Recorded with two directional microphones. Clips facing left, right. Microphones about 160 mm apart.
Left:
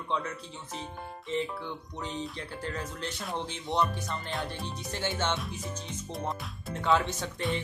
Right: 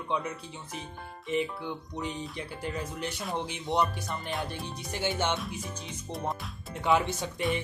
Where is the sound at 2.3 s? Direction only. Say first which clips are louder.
Right 1 dB; 15° right (ahead or behind).